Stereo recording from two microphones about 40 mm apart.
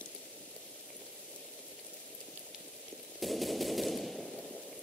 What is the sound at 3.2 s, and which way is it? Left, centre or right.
Machine gun, centre.